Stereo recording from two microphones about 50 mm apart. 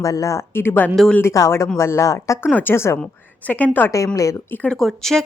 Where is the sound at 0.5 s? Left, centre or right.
Left.